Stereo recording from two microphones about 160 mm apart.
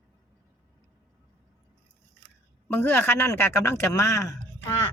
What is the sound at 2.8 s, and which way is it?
A woman's voice, 15° left (ahead or behind).